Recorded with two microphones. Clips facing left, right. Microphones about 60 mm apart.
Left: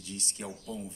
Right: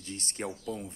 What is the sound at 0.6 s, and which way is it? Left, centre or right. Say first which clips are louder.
Speech: right 3 dB; right.